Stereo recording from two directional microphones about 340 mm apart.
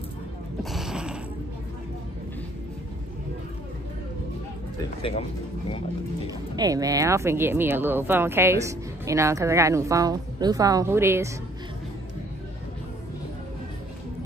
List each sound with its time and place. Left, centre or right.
0.6 s a sound: centre
5.0 s speech: centre
6.5 s speech: centre